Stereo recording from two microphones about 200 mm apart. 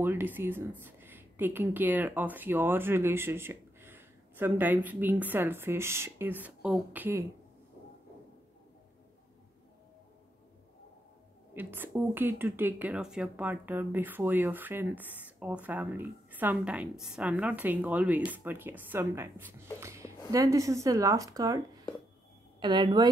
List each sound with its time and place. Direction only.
0.0 s speech: 10° right (ahead or behind)
11.5 s speech: 10° right (ahead or behind)
22.6 s a woman's voice: 25° right (ahead or behind)